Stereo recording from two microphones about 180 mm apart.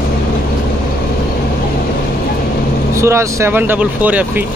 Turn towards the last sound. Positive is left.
turn(degrees=-10)  # may be behind; listen again after turning